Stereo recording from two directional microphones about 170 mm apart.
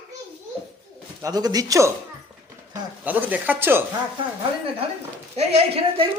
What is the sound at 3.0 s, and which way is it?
Speech, 10° right (ahead or behind).